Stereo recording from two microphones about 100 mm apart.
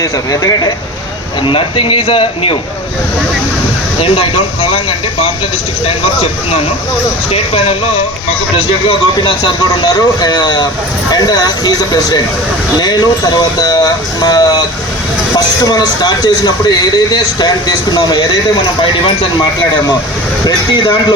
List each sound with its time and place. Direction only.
0.0 s speech: 35° left (ahead or behind)
1.5 s speech: 60° left (ahead or behind)
4.0 s speech: 70° left (ahead or behind)
7.3 s speech: 80° left
8.9 s speech: 55° left (ahead or behind)
20.4 s speech: 50° left (ahead or behind)